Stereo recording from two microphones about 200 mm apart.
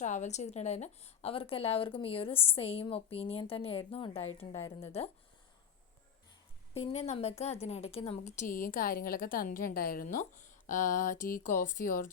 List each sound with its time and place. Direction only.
0.0 s a woman's voice: 35° left (ahead or behind)
6.7 s a woman's voice: 30° left (ahead or behind)